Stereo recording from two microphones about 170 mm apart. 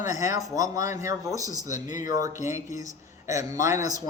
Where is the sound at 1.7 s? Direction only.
50° left (ahead or behind).